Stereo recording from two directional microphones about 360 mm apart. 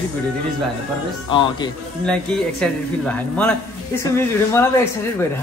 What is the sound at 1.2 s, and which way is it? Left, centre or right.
Speech, centre.